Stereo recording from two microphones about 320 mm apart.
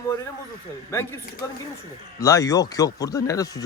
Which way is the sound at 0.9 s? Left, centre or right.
Centre.